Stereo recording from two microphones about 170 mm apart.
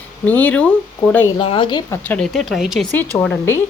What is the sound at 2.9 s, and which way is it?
Speech, 10° left (ahead or behind).